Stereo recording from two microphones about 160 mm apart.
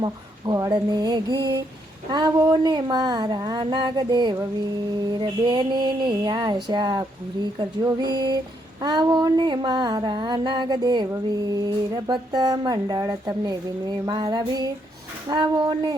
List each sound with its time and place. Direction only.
0.0 s speech: 25° right (ahead or behind)